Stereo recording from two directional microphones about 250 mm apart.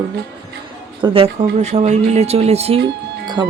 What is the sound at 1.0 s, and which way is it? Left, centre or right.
Speech, right.